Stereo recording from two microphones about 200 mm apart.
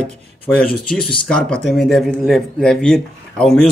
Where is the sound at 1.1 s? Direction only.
5° left (ahead or behind).